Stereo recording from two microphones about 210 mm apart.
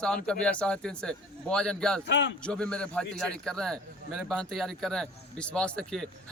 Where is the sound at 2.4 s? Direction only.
5° left (ahead or behind).